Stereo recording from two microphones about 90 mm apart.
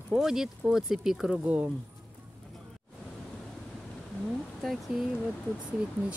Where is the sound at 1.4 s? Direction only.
15° right (ahead or behind).